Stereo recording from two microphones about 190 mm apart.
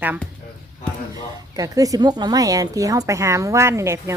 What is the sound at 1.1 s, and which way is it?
A woman's voice, 20° right (ahead or behind).